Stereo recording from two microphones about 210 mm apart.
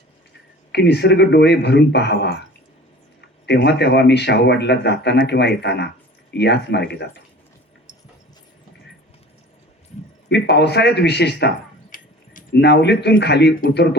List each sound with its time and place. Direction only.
0.7 s a man's voice: 55° left (ahead or behind)
10.2 s a man's voice: 55° left (ahead or behind)
11.9 s keys jangling: 40° left (ahead or behind)
12.5 s a man's voice: 55° left (ahead or behind)